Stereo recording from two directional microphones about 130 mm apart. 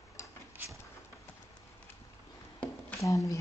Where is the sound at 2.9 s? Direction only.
25° left (ahead or behind).